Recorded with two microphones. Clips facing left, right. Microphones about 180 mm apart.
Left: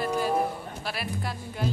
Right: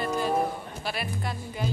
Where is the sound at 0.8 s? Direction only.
Centre (ahead or behind).